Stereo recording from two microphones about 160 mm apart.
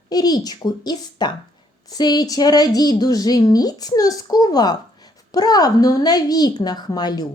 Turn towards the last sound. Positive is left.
turn(degrees=25)  # may be behind; listen again after turning